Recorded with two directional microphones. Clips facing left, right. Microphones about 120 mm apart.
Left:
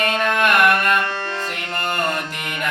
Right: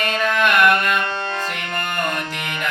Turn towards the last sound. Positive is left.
turn(degrees=50)  # may be behind; listen again after turning